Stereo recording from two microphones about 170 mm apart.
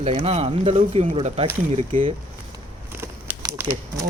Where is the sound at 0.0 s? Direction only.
35° right (ahead or behind).